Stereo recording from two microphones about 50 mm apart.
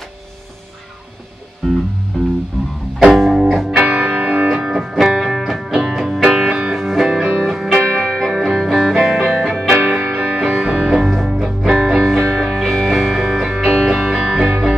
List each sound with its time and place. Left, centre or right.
1.6 s music: centre
3.0 s music: centre
3.7 s music: right
4.5 s music: centre
8.3 s music: centre
10.1 s music: right
11.0 s music: centre
12.1 s music: centre